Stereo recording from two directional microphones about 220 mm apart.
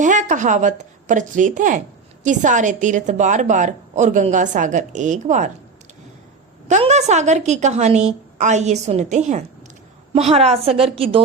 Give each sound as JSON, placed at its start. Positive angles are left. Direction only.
{"t": 0.0, "sound": "a woman's voice", "side_deg": -35}
{"t": 6.7, "sound": "a woman's voice", "side_deg": -30}